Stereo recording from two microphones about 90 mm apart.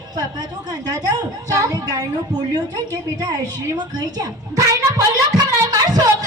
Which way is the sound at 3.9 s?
45° right (ahead or behind).